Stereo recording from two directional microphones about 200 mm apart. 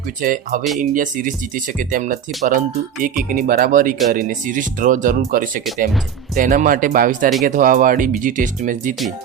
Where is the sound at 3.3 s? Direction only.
45° right (ahead or behind).